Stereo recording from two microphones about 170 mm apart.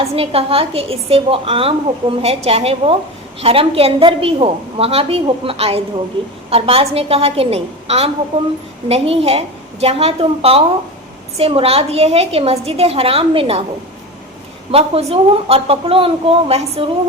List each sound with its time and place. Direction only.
0.0 s a woman's voice: 35° right (ahead or behind)
14.7 s a woman's voice: 35° right (ahead or behind)